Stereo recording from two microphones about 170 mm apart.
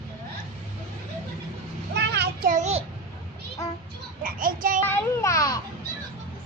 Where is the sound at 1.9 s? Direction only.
75° right (ahead or behind).